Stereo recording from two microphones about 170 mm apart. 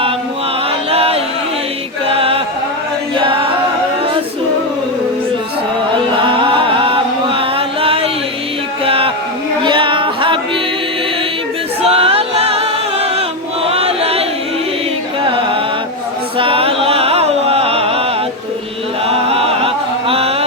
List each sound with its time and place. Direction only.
0.9 s a sound: 35° right (ahead or behind)
2.1 s chant: 35° right (ahead or behind)
3.2 s a capella: 30° right (ahead or behind)
6.1 s music: 30° right (ahead or behind)
8.8 s a sound: 35° right (ahead or behind)
9.6 s music: 30° right (ahead or behind)
11.8 s music: 35° right (ahead or behind)
13.7 s chant: 35° right (ahead or behind)
15.2 s music: 30° right (ahead or behind)
19.0 s chant: 35° right (ahead or behind)